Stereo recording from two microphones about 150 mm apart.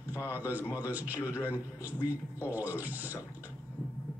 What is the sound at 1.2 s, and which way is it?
Speech, 20° left (ahead or behind).